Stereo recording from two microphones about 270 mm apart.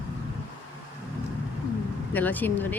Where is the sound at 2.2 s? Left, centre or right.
Centre.